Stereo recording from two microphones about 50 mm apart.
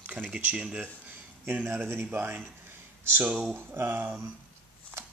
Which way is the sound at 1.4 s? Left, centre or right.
Right.